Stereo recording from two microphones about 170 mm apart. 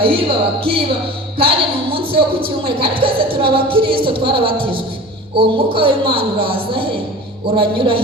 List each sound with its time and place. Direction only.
0.0 s a woman's voice: 30° right (ahead or behind)